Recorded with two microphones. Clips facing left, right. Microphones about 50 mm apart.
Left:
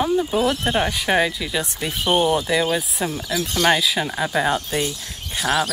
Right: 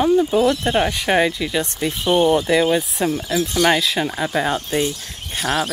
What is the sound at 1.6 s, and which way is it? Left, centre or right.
Speech, centre.